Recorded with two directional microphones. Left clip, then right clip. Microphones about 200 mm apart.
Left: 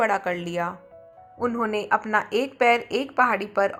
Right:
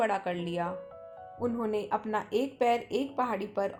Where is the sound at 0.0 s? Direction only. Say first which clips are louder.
Left 6 dB; 20° left (ahead or behind).